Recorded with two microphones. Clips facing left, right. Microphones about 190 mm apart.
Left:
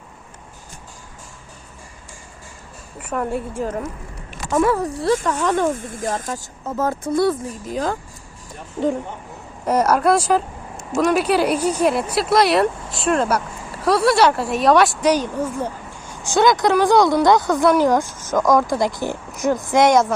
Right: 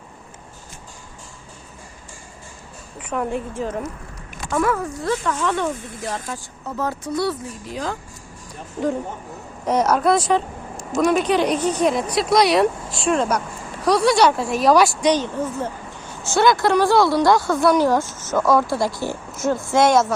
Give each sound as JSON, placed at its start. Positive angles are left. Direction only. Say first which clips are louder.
{"t": 3.2, "sound": "speech", "louder": "left 1 dB", "side_deg": 10}
{"t": 4.5, "sound": "speech", "louder": "left 3 dB", "side_deg": 30}
{"t": 9.6, "sound": "speech", "louder": "left 1 dB", "side_deg": 10}